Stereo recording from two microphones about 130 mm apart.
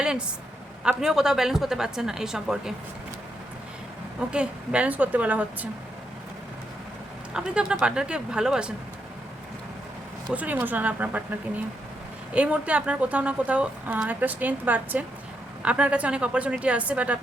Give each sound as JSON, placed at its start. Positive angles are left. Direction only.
{"t": 0.0, "sound": "a sound", "side_deg": -5}
{"t": 0.9, "sound": "a woman's voice", "side_deg": -5}
{"t": 4.3, "sound": "a woman's voice", "side_deg": -10}
{"t": 7.3, "sound": "a woman's voice", "side_deg": -5}
{"t": 10.3, "sound": "a woman's voice", "side_deg": -10}